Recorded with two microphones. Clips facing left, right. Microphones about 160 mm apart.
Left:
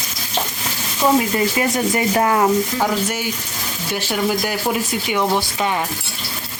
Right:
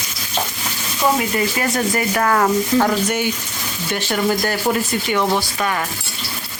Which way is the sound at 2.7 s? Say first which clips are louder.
Right 3 dB; 5° left (ahead or behind).